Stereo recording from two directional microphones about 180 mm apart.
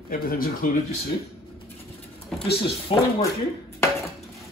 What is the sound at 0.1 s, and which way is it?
Speech, 55° left (ahead or behind).